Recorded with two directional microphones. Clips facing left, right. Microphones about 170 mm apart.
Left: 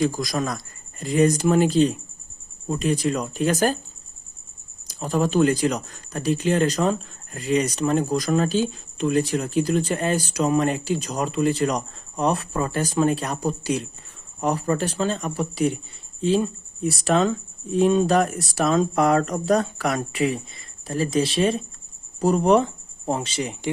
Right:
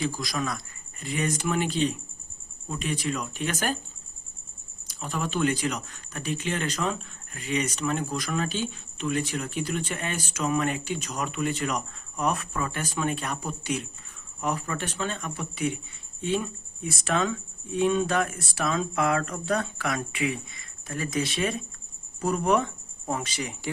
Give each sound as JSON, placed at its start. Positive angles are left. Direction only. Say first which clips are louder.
{"t": 0.0, "sound": "speech", "louder": "left 6 dB", "side_deg": 45}
{"t": 4.9, "sound": "speech", "louder": "left 9 dB", "side_deg": 40}